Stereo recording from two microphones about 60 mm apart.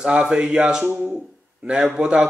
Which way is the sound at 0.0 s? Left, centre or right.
Centre.